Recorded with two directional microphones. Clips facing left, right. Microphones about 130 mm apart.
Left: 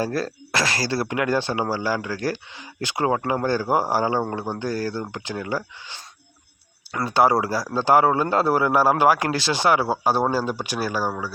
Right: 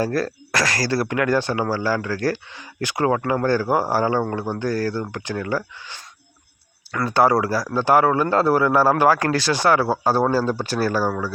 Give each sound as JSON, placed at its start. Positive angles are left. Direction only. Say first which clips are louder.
{"t": 0.0, "sound": "speech", "louder": "right 3 dB", "side_deg": 25}